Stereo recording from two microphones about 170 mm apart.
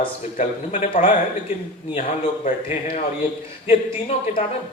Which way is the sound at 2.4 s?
40° left (ahead or behind).